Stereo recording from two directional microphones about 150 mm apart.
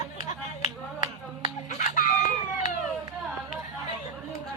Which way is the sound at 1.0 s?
55° left (ahead or behind).